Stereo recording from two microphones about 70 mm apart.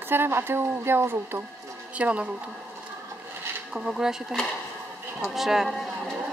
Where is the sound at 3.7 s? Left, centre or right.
Centre.